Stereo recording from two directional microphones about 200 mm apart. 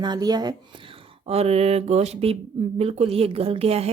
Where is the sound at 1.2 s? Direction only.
30° right (ahead or behind).